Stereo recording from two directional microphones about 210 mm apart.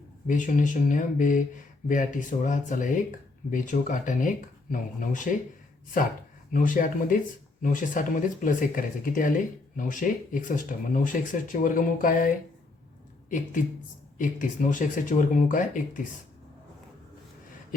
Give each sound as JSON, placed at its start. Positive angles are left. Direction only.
{"t": 0.3, "sound": "speech", "side_deg": 35}
{"t": 6.5, "sound": "speech", "side_deg": 40}
{"t": 14.2, "sound": "speech", "side_deg": 40}